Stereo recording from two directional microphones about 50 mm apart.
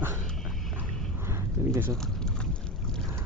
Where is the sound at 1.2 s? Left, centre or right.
Right.